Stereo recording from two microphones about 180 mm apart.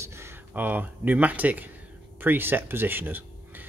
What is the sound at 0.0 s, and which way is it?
Speech, 15° right (ahead or behind).